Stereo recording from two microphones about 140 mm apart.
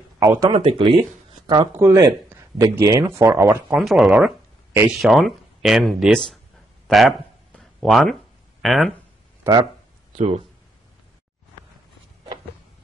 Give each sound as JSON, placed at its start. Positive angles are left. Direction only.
{"t": 0.2, "sound": "speech", "side_deg": -25}
{"t": 0.5, "sound": "speech", "side_deg": -40}
{"t": 1.8, "sound": "speech", "side_deg": -20}
{"t": 3.7, "sound": "speech", "side_deg": 0}
{"t": 6.9, "sound": "a sound", "side_deg": 0}
{"t": 8.6, "sound": "speech", "side_deg": 0}
{"t": 9.4, "sound": "speech", "side_deg": -30}
{"t": 10.1, "sound": "speech", "side_deg": -50}